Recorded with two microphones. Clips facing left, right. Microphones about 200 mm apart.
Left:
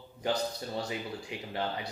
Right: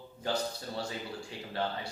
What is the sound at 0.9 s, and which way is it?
Speech, 15° left (ahead or behind).